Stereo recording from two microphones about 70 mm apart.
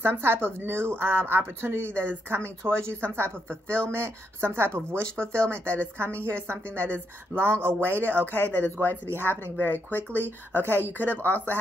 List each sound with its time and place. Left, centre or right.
0.0 s a woman's voice: right
8.4 s speech: left